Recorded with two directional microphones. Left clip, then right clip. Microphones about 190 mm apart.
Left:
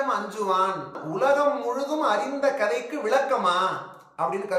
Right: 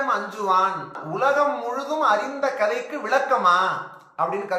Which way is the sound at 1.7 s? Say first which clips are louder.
Right 3 dB; 5° left (ahead or behind).